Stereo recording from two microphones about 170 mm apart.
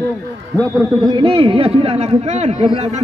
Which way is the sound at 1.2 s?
30° right (ahead or behind).